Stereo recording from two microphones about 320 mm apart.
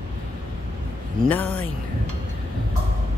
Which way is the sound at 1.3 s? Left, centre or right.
Centre.